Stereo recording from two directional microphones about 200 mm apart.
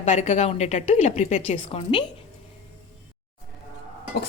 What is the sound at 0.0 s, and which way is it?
Speech, 35° left (ahead or behind).